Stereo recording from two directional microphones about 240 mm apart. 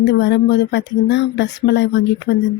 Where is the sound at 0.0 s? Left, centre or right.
Left.